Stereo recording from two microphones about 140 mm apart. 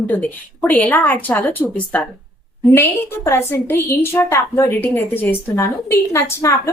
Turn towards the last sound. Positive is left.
turn(degrees=20)  # may be behind; listen again after turning